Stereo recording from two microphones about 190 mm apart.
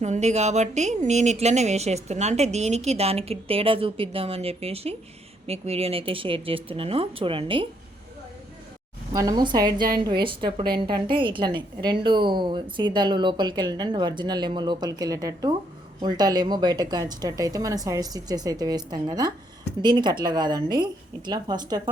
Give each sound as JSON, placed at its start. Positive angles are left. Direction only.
{"t": 0.0, "sound": "a woman's voice", "side_deg": -35}
{"t": 9.1, "sound": "a woman's voice", "side_deg": -20}